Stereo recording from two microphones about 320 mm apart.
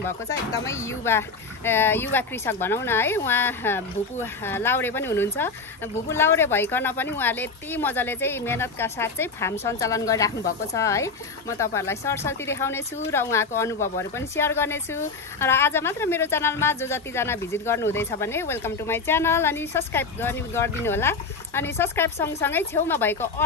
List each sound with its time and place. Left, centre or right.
0.0 s speech: centre